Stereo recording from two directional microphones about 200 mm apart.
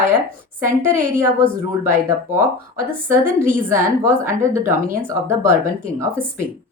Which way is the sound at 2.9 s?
10° right (ahead or behind).